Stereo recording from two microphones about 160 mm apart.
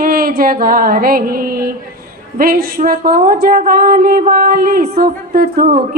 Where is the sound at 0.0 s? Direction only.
65° right (ahead or behind).